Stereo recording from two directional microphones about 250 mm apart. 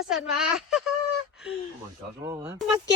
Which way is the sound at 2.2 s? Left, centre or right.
Centre.